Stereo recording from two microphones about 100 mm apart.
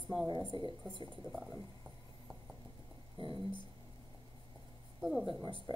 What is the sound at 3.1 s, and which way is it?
Speech, 60° right (ahead or behind).